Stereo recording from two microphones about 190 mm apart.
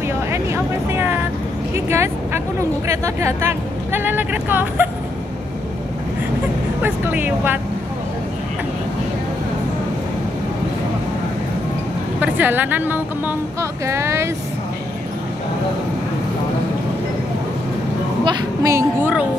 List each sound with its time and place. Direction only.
0.3 s vehicle: 15° right (ahead or behind)
1.9 s a woman's voice: 15° right (ahead or behind)
6.8 s a woman's voice: 10° right (ahead or behind)
12.2 s a woman's voice: 10° right (ahead or behind)
18.2 s a woman's voice: 20° right (ahead or behind)